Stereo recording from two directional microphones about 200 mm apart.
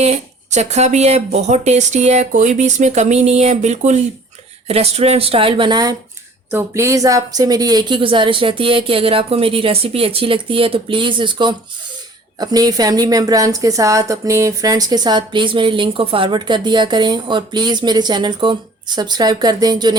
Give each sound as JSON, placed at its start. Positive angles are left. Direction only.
{"t": 0.0, "sound": "a woman's voice", "side_deg": -35}